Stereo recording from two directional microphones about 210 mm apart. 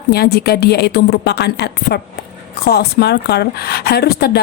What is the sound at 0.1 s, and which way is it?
A woman's voice, 50° left (ahead or behind).